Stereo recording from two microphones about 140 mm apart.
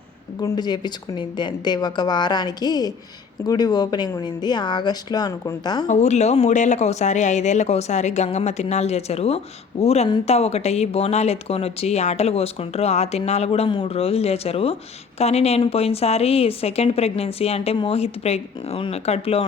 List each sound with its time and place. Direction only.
0.3 s speech: 30° left (ahead or behind)
5.9 s speech: 55° left (ahead or behind)